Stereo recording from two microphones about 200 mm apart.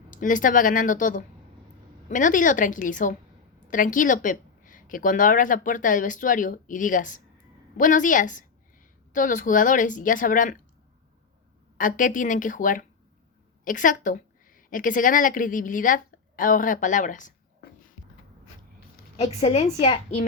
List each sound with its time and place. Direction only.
0.1 s a woman's voice: 40° left (ahead or behind)
11.8 s a woman's voice: 40° left (ahead or behind)
19.1 s a woman's voice: 30° left (ahead or behind)